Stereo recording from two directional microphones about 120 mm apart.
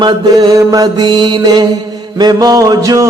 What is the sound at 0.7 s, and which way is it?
Music, 35° right (ahead or behind).